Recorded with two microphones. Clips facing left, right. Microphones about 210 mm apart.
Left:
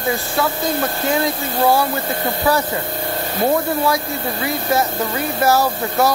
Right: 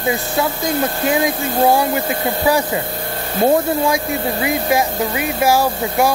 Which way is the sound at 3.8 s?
20° right (ahead or behind).